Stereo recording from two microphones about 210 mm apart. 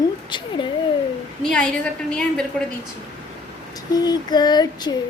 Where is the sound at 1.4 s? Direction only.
5° left (ahead or behind).